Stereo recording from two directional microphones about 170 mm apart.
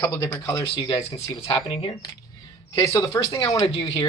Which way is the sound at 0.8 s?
30° left (ahead or behind).